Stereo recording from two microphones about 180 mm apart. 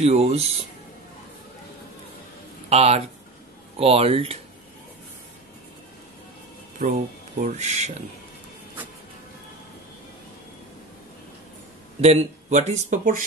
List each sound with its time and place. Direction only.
0.0 s speech: 35° right (ahead or behind)
2.7 s speech: 35° right (ahead or behind)
6.8 s speech: 50° right (ahead or behind)
12.0 s speech: 40° right (ahead or behind)